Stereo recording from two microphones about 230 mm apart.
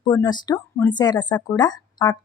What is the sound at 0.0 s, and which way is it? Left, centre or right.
A woman's voice, centre.